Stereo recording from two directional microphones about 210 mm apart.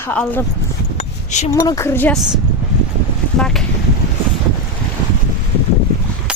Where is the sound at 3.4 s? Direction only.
Centre (ahead or behind).